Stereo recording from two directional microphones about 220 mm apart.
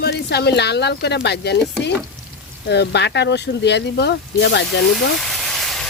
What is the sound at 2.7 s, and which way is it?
Speech, 50° left (ahead or behind).